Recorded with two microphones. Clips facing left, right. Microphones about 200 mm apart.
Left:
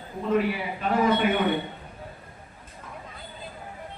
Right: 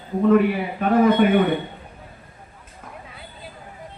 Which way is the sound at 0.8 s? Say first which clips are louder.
Right 7 dB; 55° right (ahead or behind).